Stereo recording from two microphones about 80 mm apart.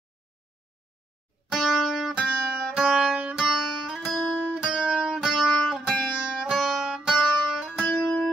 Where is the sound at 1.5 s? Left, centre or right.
Centre.